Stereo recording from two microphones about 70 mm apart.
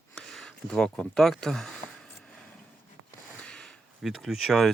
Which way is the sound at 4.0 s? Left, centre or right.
Centre.